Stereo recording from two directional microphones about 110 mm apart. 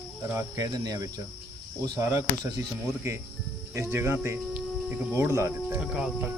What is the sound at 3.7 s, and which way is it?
Speech, 25° right (ahead or behind).